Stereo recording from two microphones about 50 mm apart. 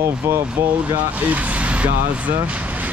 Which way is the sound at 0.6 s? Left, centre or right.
Right.